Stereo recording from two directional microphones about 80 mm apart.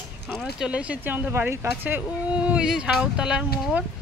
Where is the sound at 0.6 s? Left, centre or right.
Centre.